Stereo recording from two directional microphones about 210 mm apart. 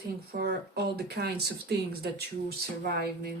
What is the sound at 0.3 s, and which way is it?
Speech, 50° right (ahead or behind).